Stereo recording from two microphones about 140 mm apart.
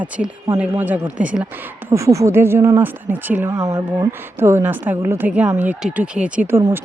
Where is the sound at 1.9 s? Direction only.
20° right (ahead or behind).